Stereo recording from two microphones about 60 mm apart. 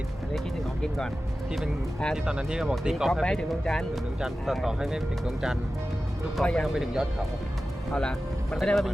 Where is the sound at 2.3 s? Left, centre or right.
Centre.